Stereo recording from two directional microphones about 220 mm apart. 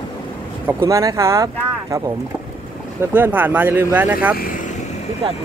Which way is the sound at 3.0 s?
10° right (ahead or behind).